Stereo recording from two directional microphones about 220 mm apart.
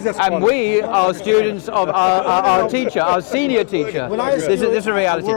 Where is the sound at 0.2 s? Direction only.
25° left (ahead or behind).